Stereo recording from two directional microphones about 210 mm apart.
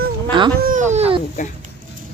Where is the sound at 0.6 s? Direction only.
35° right (ahead or behind).